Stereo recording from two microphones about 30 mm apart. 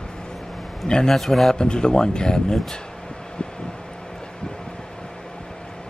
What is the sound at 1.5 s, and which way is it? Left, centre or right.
Speech, left.